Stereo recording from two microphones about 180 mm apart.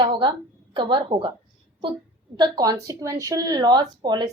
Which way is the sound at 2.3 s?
25° right (ahead or behind).